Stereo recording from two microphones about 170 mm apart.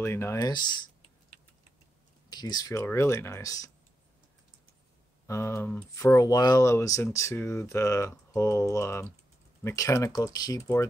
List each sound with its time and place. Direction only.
0.0 s speech: 15° left (ahead or behind)
2.2 s speech: 25° left (ahead or behind)
5.2 s speech: 15° left (ahead or behind)